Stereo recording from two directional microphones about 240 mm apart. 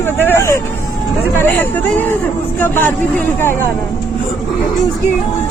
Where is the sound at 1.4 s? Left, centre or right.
Centre.